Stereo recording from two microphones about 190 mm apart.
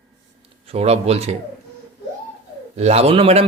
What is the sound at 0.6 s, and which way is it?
Speech, 30° right (ahead or behind).